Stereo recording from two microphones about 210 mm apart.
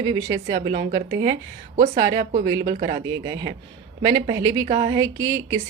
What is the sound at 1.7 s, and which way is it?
Speech, 40° right (ahead or behind).